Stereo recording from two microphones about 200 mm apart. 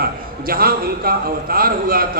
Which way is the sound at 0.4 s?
50° right (ahead or behind).